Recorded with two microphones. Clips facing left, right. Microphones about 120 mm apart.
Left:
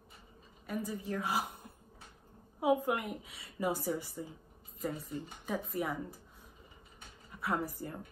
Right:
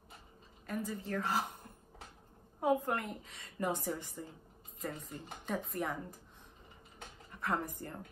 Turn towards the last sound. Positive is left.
turn(degrees=5)  # may be behind; listen again after turning